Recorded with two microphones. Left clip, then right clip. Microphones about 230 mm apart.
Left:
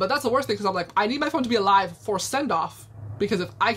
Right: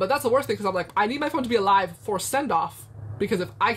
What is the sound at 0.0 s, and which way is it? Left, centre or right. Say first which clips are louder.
A woman's voice: right 1 dB; centre.